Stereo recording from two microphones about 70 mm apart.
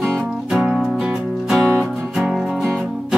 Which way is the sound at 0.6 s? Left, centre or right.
Centre.